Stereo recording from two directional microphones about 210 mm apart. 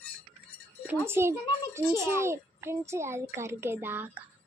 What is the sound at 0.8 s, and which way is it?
A child's voice, 10° right (ahead or behind).